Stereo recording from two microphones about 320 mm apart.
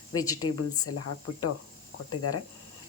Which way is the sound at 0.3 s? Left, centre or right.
Left.